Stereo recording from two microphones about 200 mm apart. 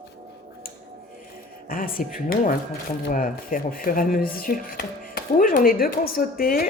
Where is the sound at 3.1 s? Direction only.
45° left (ahead or behind).